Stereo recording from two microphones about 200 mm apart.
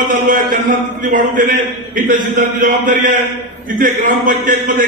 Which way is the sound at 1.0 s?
45° right (ahead or behind).